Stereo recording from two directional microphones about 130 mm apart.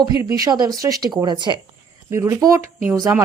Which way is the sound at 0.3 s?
30° right (ahead or behind).